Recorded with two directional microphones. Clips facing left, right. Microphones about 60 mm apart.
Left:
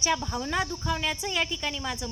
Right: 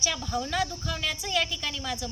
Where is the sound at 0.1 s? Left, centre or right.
Left.